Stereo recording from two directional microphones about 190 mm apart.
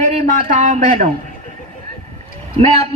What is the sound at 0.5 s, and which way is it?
Speech, 40° right (ahead or behind).